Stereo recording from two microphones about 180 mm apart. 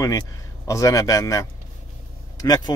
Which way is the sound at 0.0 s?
20° left (ahead or behind).